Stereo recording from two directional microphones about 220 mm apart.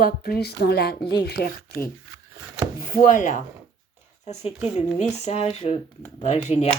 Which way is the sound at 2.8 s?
40° left (ahead or behind).